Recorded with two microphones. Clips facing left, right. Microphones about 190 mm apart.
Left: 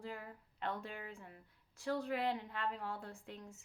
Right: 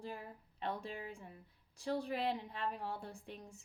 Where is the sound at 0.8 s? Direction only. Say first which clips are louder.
Right 2 dB; 15° right (ahead or behind).